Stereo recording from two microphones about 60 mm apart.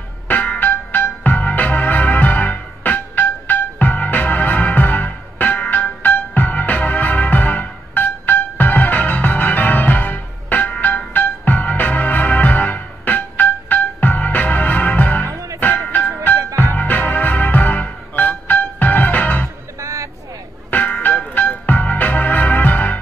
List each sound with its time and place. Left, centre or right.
0.3 s music: left
15.2 s music: right
15.6 s music: left
19.8 s vehicle: right
20.7 s music: left